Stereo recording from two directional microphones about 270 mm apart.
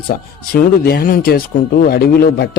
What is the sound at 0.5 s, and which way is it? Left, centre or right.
Speech, left.